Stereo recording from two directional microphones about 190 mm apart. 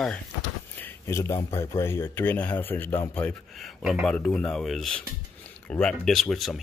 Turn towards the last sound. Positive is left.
turn(degrees=0)  # may be behind; listen again after turning